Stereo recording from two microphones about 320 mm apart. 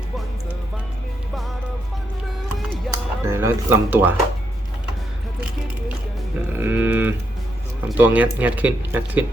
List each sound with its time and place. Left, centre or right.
2.6 s music: centre
6.5 s speech: centre